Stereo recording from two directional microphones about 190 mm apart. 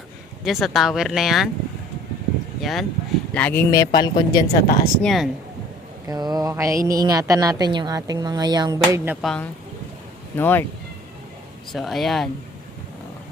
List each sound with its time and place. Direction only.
0.4 s speech: centre (ahead or behind)
2.6 s a woman's voice: centre (ahead or behind); by 4.4 s 20° left (ahead or behind)
4.6 s speech: 50° left (ahead or behind)
5.0 s speech: centre (ahead or behind)
6.1 s a woman's voice: 20° right (ahead or behind)
9.2 s speech: 5° left (ahead or behind)
11.7 s speech: centre (ahead or behind)